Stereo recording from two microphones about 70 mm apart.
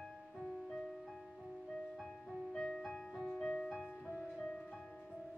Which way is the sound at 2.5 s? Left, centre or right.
Centre.